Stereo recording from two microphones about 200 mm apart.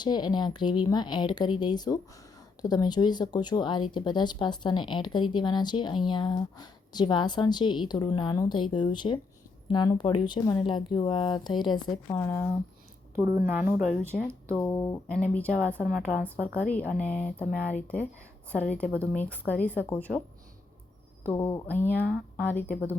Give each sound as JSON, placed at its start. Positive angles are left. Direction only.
{"t": 0.0, "sound": "a woman's voice", "side_deg": 20}
{"t": 12.1, "sound": "speech", "side_deg": 5}
{"t": 13.1, "sound": "speech", "side_deg": -10}
{"t": 14.5, "sound": "speech", "side_deg": 15}
{"t": 15.0, "sound": "speech", "side_deg": 5}
{"t": 21.2, "sound": "speech", "side_deg": 10}